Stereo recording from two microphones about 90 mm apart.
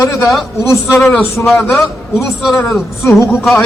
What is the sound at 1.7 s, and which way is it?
Speech, 5° right (ahead or behind).